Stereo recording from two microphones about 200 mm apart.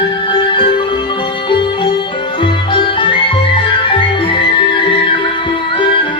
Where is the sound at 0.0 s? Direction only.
25° left (ahead or behind).